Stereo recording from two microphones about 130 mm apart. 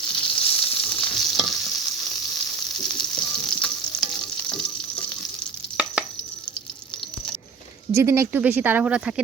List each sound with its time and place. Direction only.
0.1 s stir: 10° left (ahead or behind)
2.9 s frying: 5° left (ahead or behind)
5.7 s chopping: 10° right (ahead or behind)
7.9 s speech: 20° right (ahead or behind)